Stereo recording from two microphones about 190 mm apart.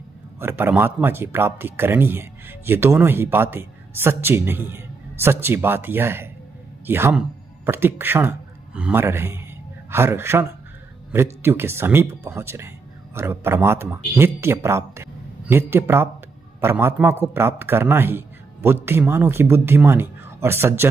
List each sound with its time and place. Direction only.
0.4 s speech: 10° right (ahead or behind)